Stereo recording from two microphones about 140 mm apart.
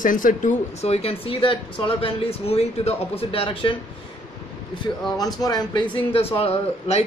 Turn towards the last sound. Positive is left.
turn(degrees=45)  # may be behind; listen again after turning